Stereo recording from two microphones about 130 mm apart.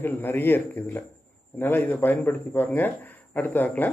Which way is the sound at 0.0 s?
15° left (ahead or behind).